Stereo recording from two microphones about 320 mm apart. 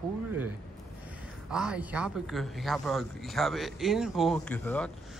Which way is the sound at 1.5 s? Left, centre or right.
Centre.